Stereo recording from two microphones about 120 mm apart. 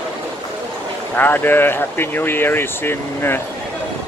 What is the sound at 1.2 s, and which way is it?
Speech, 15° left (ahead or behind).